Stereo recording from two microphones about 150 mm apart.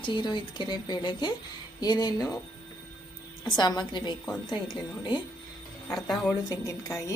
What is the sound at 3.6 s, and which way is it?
A woman's voice, 30° left (ahead or behind).